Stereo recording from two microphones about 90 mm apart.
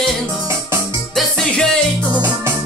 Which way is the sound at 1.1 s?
5° left (ahead or behind).